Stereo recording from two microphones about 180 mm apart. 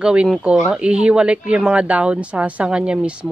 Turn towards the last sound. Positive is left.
turn(degrees=-5)  # may be behind; listen again after turning